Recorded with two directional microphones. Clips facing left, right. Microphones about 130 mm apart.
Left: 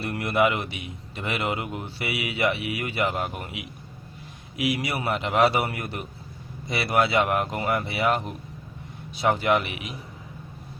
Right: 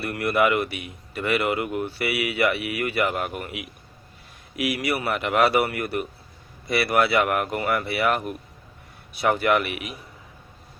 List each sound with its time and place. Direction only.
0.0 s a man's voice: 25° left (ahead or behind)